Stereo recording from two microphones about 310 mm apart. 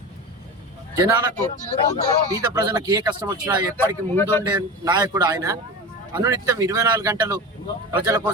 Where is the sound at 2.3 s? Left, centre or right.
Centre.